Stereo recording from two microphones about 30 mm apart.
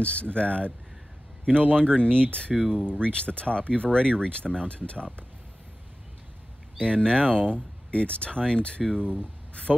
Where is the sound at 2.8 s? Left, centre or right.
Left.